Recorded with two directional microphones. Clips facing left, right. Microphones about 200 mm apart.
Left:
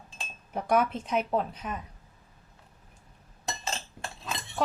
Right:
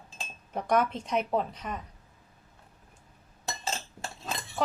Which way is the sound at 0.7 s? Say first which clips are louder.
Left 1 dB; 5° left (ahead or behind).